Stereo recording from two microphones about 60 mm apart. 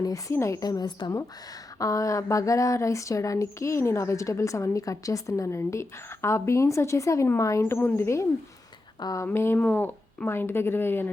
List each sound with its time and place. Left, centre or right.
0.0 s a woman's voice: left
0.3 s speech: left
1.8 s speech: left
5.5 s speech: left
7.6 s a woman's voice: left
7.9 s speech: left
9.2 s a woman's voice: left